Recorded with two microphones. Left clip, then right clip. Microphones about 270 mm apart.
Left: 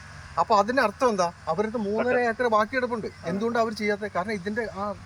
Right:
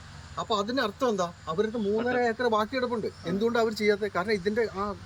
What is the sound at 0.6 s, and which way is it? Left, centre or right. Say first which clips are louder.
Speech: left 5 dB; centre.